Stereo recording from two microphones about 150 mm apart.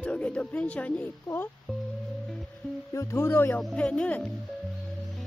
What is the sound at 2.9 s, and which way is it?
Speech, 15° left (ahead or behind).